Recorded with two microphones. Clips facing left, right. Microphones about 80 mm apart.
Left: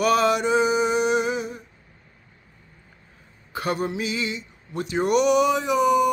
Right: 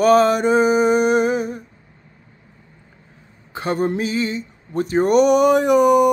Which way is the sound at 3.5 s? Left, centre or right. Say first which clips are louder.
Right 5 dB; right.